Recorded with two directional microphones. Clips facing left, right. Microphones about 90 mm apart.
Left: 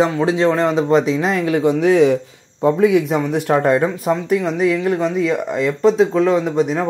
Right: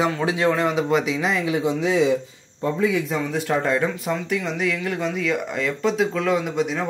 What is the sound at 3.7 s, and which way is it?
Speech, 35° left (ahead or behind).